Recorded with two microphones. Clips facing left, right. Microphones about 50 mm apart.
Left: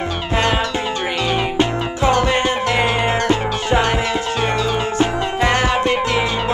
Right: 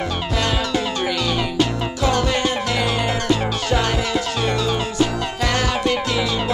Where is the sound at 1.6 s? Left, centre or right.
Left.